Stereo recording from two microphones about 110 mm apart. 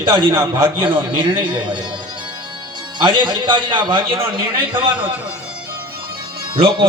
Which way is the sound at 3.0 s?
45° right (ahead or behind).